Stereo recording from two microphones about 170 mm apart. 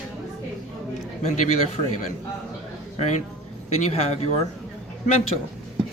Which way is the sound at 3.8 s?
40° left (ahead or behind).